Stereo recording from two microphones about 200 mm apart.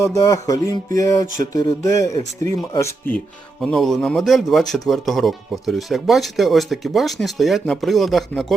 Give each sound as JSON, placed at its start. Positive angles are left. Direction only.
{"t": 0.0, "sound": "speech", "side_deg": 15}
{"t": 3.6, "sound": "speech", "side_deg": 0}